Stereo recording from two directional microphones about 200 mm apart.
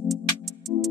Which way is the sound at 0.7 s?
20° right (ahead or behind).